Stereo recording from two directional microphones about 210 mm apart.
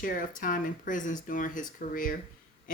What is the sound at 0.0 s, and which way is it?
Speech, 40° left (ahead or behind).